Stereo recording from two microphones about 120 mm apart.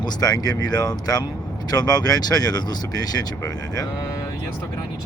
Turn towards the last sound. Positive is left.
turn(degrees=30)  # may be behind; listen again after turning